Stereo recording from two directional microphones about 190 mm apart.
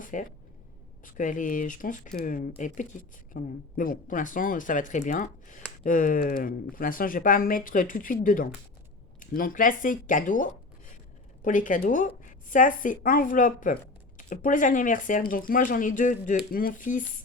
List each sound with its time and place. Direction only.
0.0 s speech: 45° left (ahead or behind)